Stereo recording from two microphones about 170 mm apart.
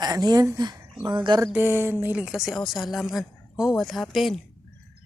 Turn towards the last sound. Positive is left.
turn(degrees=0)  # may be behind; listen again after turning